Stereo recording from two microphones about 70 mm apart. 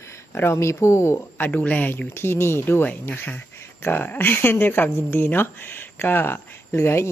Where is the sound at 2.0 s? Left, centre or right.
Left.